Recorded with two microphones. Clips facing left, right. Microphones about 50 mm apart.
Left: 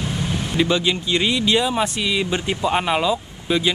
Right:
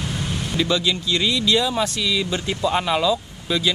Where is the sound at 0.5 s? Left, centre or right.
Left.